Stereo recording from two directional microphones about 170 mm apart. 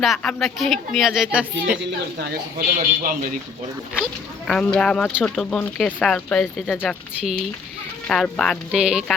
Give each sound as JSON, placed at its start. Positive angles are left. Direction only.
{"t": 0.0, "sound": "speech", "side_deg": 5}
{"t": 1.8, "sound": "a woman's voice", "side_deg": -85}
{"t": 2.6, "sound": "speech", "side_deg": -55}
{"t": 3.9, "sound": "speech", "side_deg": 5}
{"t": 8.0, "sound": "speech", "side_deg": 5}